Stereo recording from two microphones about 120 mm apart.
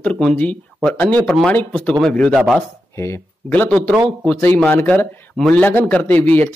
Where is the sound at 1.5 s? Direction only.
15° left (ahead or behind); by 2.6 s 5° right (ahead or behind).